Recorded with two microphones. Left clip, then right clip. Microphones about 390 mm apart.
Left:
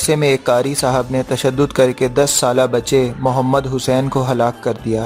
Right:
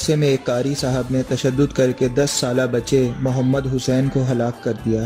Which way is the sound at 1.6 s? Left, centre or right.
Centre.